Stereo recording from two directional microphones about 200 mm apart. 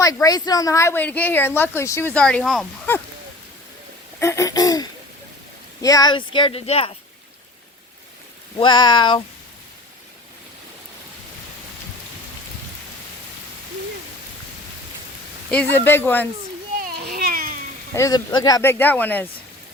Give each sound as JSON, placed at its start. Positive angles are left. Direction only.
{"t": 0.0, "sound": "a woman's voice", "side_deg": 15}
{"t": 4.2, "sound": "a woman's voice", "side_deg": 15}
{"t": 8.5, "sound": "speech", "side_deg": 25}
{"t": 15.4, "sound": "a woman's voice", "side_deg": 10}
{"t": 16.9, "sound": "cat", "side_deg": -50}
{"t": 17.9, "sound": "a woman's voice", "side_deg": 15}